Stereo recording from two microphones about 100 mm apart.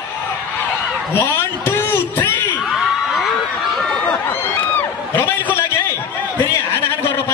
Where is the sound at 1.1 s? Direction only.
25° left (ahead or behind).